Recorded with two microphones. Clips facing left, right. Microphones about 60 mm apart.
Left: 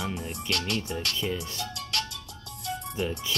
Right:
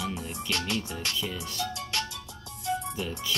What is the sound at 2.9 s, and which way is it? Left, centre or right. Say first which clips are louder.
Speech: left 3 dB; left.